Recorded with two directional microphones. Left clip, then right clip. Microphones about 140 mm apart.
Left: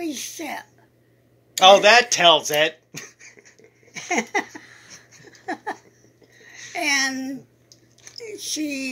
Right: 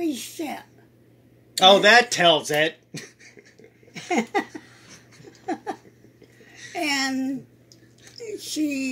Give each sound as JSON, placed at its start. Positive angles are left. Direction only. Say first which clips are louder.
{"t": 0.0, "sound": "speech", "louder": "right 1 dB", "side_deg": -15}
{"t": 1.5, "sound": "speech", "louder": "left 2 dB", "side_deg": -30}
{"t": 3.9, "sound": "a sound", "louder": "left 1 dB", "side_deg": -20}
{"t": 6.4, "sound": "a child's voice", "louder": "left 2 dB", "side_deg": -25}